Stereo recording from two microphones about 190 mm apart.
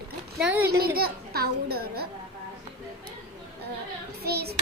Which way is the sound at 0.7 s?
55° right (ahead or behind).